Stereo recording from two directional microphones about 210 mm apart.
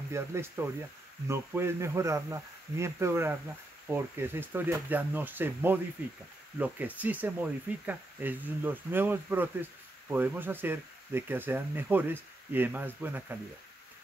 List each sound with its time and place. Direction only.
0.1 s speech: 10° right (ahead or behind)